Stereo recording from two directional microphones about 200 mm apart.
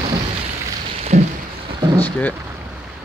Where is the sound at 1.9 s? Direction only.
10° left (ahead or behind).